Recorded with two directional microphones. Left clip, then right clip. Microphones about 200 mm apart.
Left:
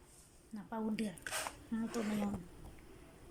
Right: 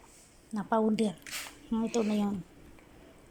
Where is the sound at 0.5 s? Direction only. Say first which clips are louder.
Right 13 dB; 15° right (ahead or behind).